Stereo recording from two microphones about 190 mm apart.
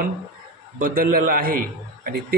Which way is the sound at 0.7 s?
50° right (ahead or behind).